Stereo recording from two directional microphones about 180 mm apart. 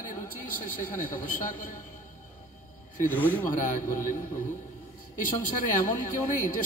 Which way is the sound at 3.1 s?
10° left (ahead or behind).